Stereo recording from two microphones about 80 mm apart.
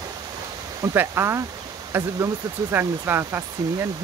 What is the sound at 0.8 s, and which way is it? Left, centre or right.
Speech, right.